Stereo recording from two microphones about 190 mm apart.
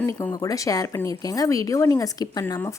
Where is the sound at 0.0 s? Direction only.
20° left (ahead or behind).